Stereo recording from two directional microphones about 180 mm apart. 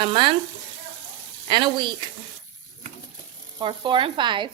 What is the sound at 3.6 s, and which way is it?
Speech, 25° right (ahead or behind).